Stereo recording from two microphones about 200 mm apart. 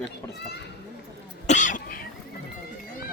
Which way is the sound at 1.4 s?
40° left (ahead or behind).